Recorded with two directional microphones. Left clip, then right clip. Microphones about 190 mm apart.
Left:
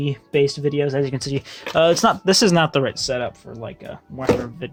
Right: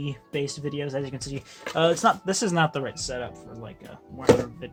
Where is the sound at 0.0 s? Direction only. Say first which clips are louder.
Left 11 dB; 40° left (ahead or behind).